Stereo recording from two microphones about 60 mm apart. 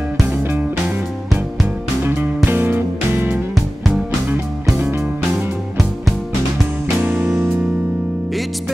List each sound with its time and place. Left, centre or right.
0.4 s music: right
2.0 s music: right
7.0 s music: right